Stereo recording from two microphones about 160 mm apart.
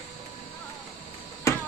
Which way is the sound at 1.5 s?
20° left (ahead or behind).